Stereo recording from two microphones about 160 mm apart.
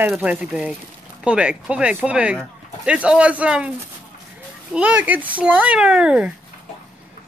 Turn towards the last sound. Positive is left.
turn(degrees=-5)  # may be behind; listen again after turning